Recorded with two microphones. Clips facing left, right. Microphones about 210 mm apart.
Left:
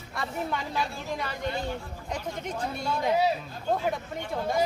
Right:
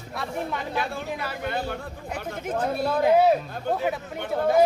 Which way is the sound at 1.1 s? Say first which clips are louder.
Right 1 dB; 5° right (ahead or behind).